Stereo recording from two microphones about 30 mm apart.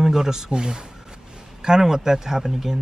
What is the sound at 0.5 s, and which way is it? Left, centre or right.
Music, right.